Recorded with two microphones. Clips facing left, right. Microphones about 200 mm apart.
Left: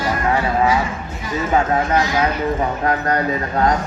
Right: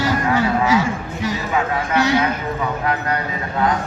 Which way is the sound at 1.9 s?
70° right (ahead or behind).